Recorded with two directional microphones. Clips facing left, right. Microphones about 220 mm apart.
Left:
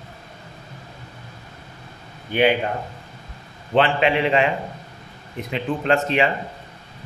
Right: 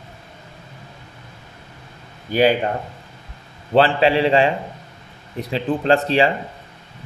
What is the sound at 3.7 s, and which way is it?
Speech, 35° right (ahead or behind).